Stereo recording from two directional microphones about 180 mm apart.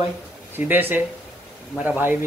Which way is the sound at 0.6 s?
10° right (ahead or behind).